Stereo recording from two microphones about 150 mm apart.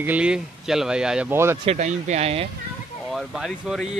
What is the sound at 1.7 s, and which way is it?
Speech, 50° right (ahead or behind).